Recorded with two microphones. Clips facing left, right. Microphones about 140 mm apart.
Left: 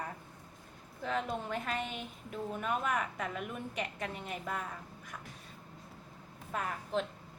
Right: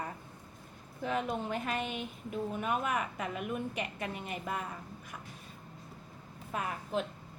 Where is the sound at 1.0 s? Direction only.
10° right (ahead or behind).